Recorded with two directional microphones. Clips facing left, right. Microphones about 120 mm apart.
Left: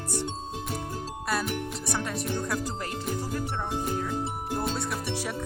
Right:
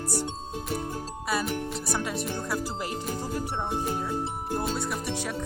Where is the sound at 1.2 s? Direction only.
Centre (ahead or behind).